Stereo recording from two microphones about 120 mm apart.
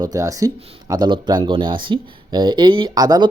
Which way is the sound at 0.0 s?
30° right (ahead or behind).